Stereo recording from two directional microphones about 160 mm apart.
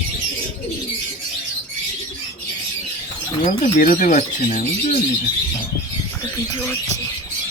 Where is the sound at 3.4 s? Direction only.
55° left (ahead or behind).